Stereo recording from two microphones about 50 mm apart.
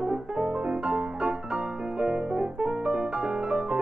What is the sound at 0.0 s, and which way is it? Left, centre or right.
Music, centre.